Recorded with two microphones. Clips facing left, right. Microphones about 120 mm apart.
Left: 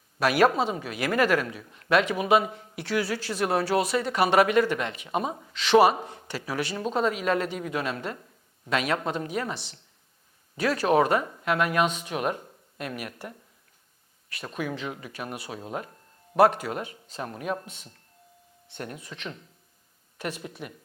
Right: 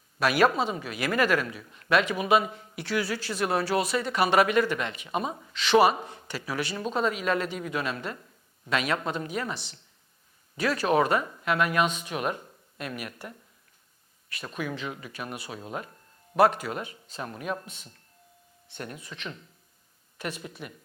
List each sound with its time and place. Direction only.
0.2 s speech: 50° left (ahead or behind)
0.5 s speech: 35° left (ahead or behind)
1.9 s speech: 50° left (ahead or behind); by 5.5 s 25° left (ahead or behind)
5.5 s speech: 55° left (ahead or behind)
6.0 s speech: 30° left (ahead or behind)
8.7 s speech: 55° left (ahead or behind)
9.0 s speech: 35° left (ahead or behind)
10.6 s speech: 45° left (ahead or behind); by 11.4 s 30° left (ahead or behind)
11.4 s speech: 50° left (ahead or behind)
14.3 s speech: 50° left (ahead or behind)
14.5 s speech: 40° left (ahead or behind)
17.7 s speech: 15° left (ahead or behind)
18.8 s speech: 40° left (ahead or behind)